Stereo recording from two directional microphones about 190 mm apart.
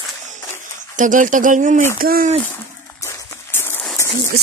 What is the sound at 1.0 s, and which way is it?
Speech, 45° right (ahead or behind).